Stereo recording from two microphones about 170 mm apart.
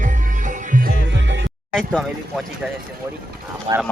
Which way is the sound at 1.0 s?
90° right.